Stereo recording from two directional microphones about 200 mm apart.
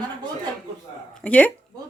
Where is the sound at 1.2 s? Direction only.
5° left (ahead or behind).